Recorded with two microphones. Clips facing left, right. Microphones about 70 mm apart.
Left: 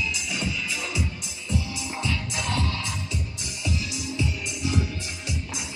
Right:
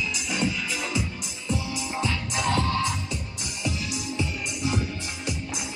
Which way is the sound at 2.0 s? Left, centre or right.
Right.